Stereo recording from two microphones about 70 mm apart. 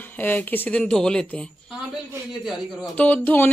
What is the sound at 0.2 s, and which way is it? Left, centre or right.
Speech, left.